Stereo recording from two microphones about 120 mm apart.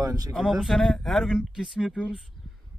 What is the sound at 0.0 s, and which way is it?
Speech, 30° right (ahead or behind).